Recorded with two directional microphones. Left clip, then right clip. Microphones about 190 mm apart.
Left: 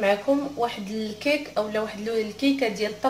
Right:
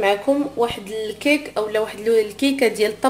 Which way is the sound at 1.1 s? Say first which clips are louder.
Right 4 dB; 50° right (ahead or behind).